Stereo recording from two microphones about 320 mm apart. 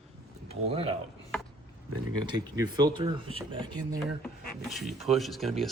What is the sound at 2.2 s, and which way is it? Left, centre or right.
Speech, centre.